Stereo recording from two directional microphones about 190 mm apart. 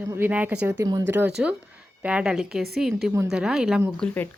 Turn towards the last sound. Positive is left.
turn(degrees=5)  # may be behind; listen again after turning